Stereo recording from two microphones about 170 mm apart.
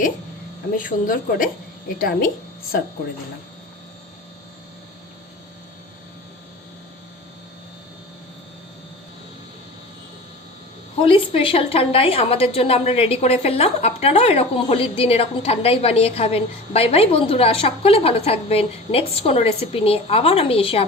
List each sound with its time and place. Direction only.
0.8 s speech: 55° left (ahead or behind)
11.0 s a woman's voice: 30° left (ahead or behind)